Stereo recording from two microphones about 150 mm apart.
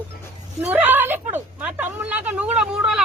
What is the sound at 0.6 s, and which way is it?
A woman's voice, 10° right (ahead or behind).